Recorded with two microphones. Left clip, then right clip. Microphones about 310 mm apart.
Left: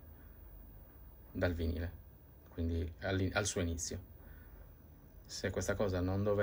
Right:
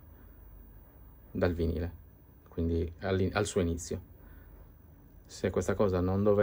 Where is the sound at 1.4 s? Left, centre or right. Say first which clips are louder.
Right 6 dB; centre.